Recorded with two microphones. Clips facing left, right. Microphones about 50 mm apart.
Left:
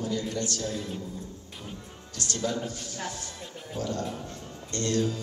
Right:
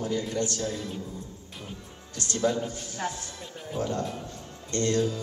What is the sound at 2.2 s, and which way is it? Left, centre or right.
A man's voice, right.